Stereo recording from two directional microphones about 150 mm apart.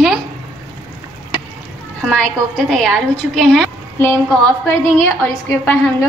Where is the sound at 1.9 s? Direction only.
5° left (ahead or behind).